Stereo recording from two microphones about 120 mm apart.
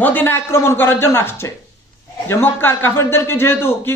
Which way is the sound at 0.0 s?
15° left (ahead or behind).